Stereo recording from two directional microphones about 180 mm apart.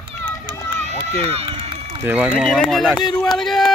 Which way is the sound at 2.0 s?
5° right (ahead or behind).